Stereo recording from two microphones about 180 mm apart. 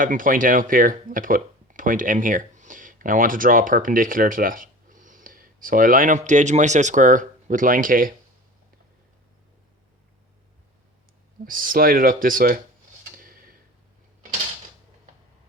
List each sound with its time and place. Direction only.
0.0 s speech: 50° right (ahead or behind)
11.4 s speech: 50° right (ahead or behind)
13.1 s tick-tock: 50° right (ahead or behind)